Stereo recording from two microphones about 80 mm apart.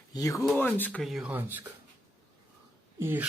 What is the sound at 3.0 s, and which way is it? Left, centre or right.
Speech, right.